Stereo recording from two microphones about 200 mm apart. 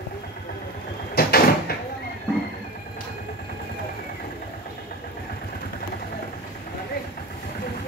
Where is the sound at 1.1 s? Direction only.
50° left (ahead or behind).